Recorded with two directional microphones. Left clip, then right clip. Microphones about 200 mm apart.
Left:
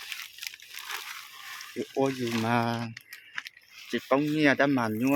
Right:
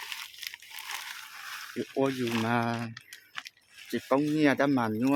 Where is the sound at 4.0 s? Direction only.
10° left (ahead or behind).